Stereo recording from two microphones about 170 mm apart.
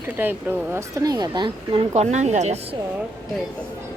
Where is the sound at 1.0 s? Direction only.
25° right (ahead or behind); by 2.6 s 40° right (ahead or behind).